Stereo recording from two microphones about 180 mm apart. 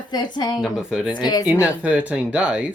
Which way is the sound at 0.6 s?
5° right (ahead or behind).